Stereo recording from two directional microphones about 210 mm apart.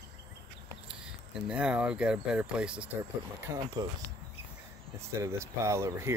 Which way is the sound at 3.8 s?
20° right (ahead or behind).